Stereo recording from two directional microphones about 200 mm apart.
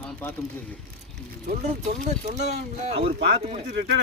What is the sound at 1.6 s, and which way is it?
Speech, 35° right (ahead or behind).